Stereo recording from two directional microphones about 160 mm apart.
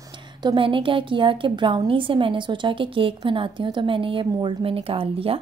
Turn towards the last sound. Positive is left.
turn(degrees=-35)  # may be behind; listen again after turning